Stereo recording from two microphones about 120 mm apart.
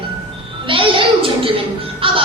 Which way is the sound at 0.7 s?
45° right (ahead or behind).